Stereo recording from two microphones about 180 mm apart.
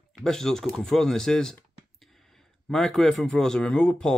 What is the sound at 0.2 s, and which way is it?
Speech, 5° left (ahead or behind).